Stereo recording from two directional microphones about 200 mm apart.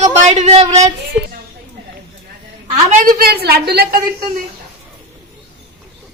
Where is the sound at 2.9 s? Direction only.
40° right (ahead or behind).